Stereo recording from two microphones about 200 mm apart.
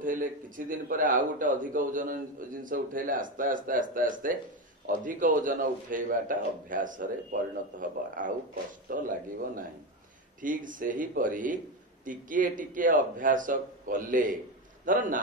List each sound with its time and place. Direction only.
0.0 s a man's voice: 45° right (ahead or behind)